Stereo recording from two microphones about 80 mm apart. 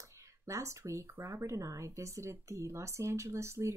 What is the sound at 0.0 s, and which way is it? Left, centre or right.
Speech, right.